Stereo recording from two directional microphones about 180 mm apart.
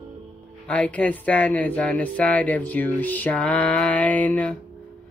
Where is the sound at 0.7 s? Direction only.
5° left (ahead or behind).